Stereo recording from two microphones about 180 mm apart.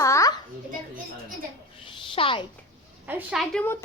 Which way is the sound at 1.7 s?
30° left (ahead or behind).